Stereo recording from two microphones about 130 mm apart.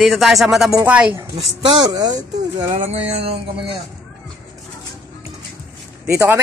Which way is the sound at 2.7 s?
50° right (ahead or behind).